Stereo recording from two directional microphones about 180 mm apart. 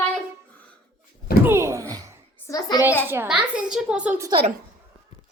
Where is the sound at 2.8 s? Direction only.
10° right (ahead or behind).